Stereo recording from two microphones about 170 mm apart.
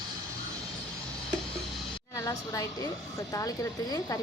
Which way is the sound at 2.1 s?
20° left (ahead or behind).